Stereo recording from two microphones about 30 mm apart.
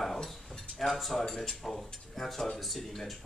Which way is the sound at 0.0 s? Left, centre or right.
Centre.